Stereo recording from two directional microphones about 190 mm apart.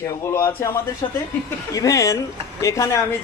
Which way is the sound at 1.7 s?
20° left (ahead or behind).